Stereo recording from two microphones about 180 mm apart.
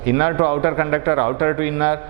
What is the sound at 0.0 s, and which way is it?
Speech, 15° right (ahead or behind).